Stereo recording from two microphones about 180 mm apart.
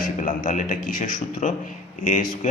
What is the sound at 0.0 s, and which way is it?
A man's voice, 45° left (ahead or behind).